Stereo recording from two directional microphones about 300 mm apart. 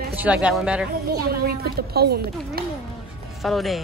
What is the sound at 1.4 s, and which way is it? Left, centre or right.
Speech, right.